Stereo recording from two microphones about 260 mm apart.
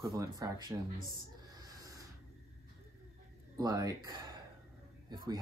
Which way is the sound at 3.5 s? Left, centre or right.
Centre.